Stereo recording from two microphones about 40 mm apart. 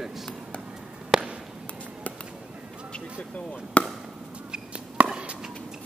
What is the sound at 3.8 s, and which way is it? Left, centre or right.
Speech, left.